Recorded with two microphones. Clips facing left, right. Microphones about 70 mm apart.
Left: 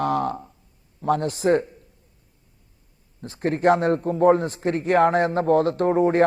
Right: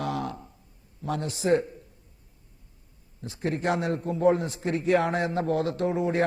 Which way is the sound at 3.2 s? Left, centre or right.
Left.